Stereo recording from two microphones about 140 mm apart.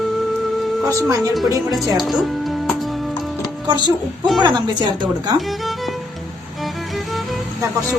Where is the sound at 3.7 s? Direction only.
30° right (ahead or behind).